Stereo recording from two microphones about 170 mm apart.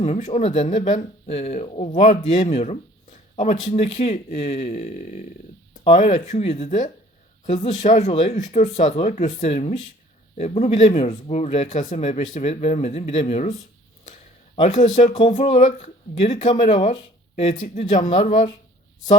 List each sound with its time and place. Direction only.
0.0 s speech: 40° left (ahead or behind)
14.8 s speech: 45° left (ahead or behind)